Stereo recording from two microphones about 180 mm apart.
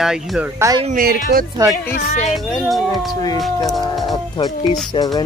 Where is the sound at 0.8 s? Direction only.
55° right (ahead or behind).